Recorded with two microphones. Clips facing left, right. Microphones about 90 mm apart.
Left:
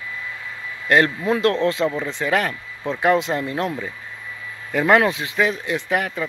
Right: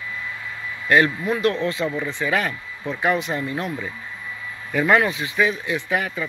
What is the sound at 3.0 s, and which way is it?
Speech, 90° left.